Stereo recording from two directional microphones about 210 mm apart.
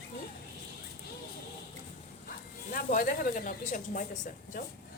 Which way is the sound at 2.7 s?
40° left (ahead or behind).